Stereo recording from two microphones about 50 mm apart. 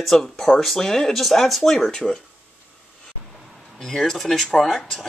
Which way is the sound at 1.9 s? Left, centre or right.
Centre.